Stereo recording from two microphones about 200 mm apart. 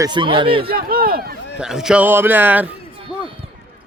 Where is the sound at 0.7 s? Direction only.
45° right (ahead or behind).